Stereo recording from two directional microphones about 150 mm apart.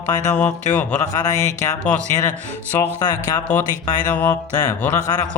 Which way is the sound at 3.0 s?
25° left (ahead or behind).